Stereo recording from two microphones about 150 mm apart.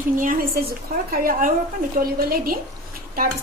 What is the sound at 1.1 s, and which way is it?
A woman's voice, 75° right (ahead or behind).